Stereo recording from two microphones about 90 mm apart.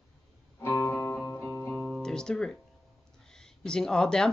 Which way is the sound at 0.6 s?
30° left (ahead or behind).